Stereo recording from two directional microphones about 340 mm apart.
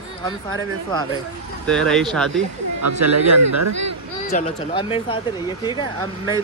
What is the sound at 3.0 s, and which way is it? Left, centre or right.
Speech, right.